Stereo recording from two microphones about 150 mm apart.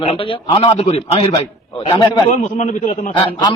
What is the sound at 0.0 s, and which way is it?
A man's voice, 35° left (ahead or behind).